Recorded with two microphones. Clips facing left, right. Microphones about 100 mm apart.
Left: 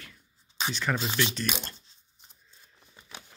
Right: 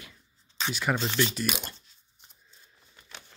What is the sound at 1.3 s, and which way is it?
Speech, 5° right (ahead or behind).